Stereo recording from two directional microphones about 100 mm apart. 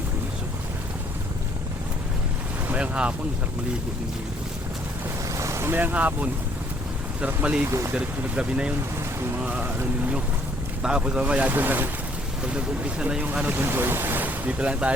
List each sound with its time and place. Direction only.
2.6 s speech: 10° right (ahead or behind)
5.3 s boat: 30° right (ahead or behind)
7.2 s speech: 10° right (ahead or behind)
7.7 s speech: 30° right (ahead or behind)
7.9 s speech: 10° right (ahead or behind)